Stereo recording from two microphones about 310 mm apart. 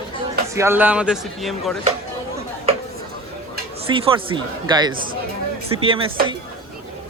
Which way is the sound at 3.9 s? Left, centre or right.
Centre.